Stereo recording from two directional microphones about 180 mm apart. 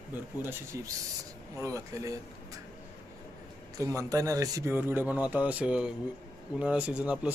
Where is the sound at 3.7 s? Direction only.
15° right (ahead or behind).